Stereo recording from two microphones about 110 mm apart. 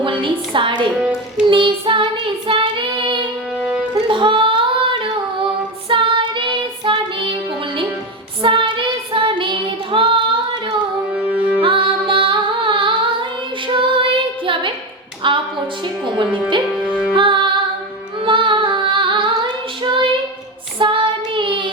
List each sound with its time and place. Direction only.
0.0 s a sound: 50° right (ahead or behind)
0.9 s a child's voice: 10° right (ahead or behind)
1.5 s child singing: 50° right (ahead or behind)
3.6 s music: 10° right (ahead or behind)
3.9 s singing: 50° right (ahead or behind)
5.9 s child singing: 50° right (ahead or behind)
8.4 s child singing: 50° right (ahead or behind)
11.1 s music: 15° right (ahead or behind)
11.6 s music: 50° right (ahead or behind)
13.7 s child singing: 50° right (ahead or behind)
14.4 s a sound: 50° right (ahead or behind)
17.2 s music: 50° right (ahead or behind)
18.3 s female singing: 50° right (ahead or behind)
20.7 s child singing: 50° right (ahead or behind)